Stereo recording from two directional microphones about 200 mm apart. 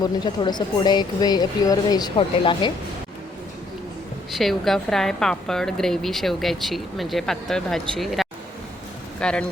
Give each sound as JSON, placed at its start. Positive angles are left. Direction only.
{"t": 0.0, "sound": "speech", "side_deg": 20}
{"t": 4.4, "sound": "a woman's voice", "side_deg": 0}